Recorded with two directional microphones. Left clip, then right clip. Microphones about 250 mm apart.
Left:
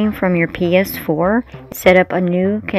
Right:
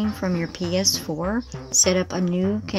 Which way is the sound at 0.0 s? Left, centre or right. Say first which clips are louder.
Left 10 dB; centre.